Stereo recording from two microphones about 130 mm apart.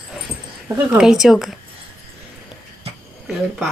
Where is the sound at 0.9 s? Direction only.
5° right (ahead or behind).